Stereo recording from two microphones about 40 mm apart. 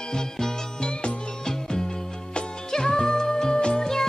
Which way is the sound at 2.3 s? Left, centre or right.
Centre.